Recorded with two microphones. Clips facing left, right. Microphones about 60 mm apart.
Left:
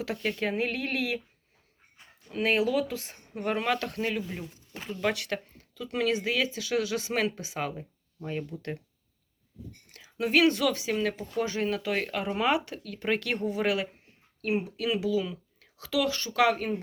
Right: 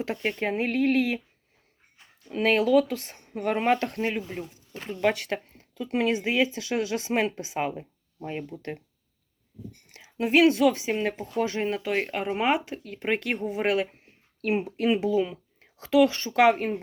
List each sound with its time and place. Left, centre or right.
0.0 s speech: right
2.4 s speech: right; by 8.4 s centre
9.9 s a sound: right
10.3 s speech: centre
14.4 s speech: right